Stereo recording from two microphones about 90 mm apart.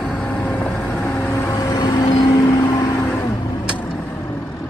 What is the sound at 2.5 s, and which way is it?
Music, 45° left (ahead or behind).